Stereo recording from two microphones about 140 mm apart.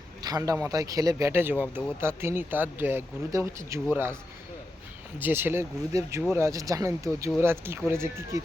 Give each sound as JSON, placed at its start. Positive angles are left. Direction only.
{"t": 0.2, "sound": "speech", "side_deg": -25}
{"t": 5.2, "sound": "speech", "side_deg": -15}